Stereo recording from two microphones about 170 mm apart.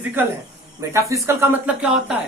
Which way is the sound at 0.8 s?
20° right (ahead or behind).